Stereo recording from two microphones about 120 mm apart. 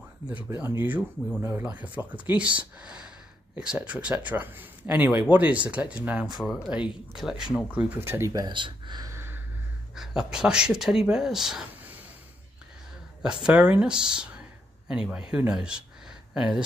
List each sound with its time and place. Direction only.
0.5 s speech: 20° right (ahead or behind)
7.7 s speech: 20° right (ahead or behind)
8.3 s speech: 35° right (ahead or behind)
9.1 s a sound: 20° right (ahead or behind)
9.9 s speech: 5° right (ahead or behind)
13.2 s speech: 5° right (ahead or behind)